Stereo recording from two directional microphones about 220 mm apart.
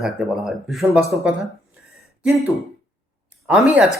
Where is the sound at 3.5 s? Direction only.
5° right (ahead or behind).